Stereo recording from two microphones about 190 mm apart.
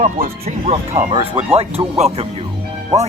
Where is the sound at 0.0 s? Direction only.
45° right (ahead or behind).